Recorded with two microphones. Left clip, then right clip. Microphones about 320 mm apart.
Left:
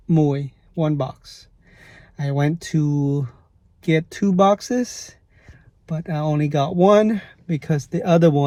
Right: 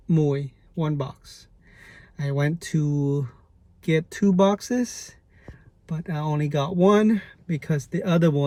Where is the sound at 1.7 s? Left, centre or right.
Left.